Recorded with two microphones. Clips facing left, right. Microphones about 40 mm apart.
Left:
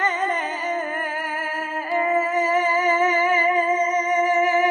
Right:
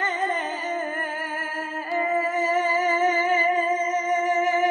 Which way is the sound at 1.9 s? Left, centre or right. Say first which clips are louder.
Left 3 dB; centre.